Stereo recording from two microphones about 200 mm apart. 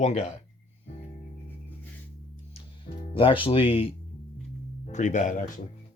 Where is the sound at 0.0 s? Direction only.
35° left (ahead or behind).